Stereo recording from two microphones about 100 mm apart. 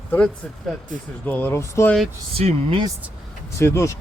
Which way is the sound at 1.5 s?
30° left (ahead or behind).